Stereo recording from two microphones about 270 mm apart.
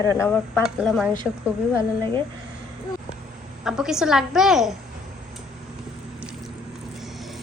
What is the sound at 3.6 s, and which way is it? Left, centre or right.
A woman's voice, centre.